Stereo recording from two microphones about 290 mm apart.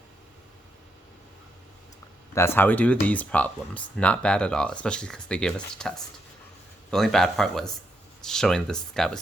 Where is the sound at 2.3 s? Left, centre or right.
Centre.